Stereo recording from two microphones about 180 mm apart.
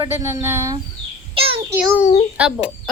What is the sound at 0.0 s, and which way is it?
Speech, 20° right (ahead or behind).